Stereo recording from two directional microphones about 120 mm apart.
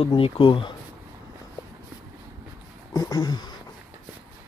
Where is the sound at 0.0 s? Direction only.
45° left (ahead or behind).